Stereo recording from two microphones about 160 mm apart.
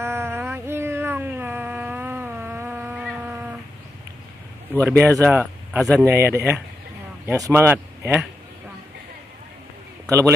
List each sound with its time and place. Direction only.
0.0 s a sound: 15° right (ahead or behind)
4.8 s speech: 15° right (ahead or behind)
5.8 s speech: centre (ahead or behind)
6.0 s speech: 15° right (ahead or behind)
10.0 s a man's voice: 20° right (ahead or behind)